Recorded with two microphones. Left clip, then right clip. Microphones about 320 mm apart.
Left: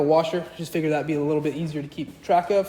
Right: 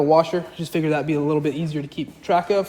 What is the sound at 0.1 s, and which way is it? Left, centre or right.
A man's voice, centre.